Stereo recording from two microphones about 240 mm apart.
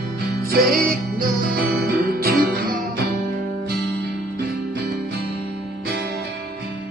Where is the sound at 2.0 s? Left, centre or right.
Right.